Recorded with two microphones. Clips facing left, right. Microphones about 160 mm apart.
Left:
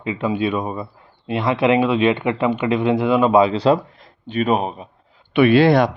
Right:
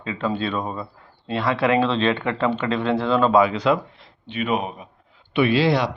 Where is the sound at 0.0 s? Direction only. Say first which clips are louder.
Left 4 dB; 15° left (ahead or behind).